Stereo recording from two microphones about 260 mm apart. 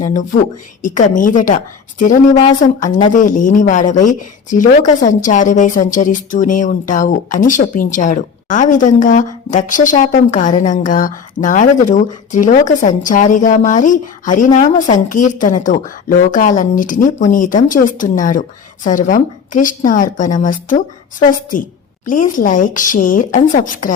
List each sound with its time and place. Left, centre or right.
0.0 s a woman's voice: left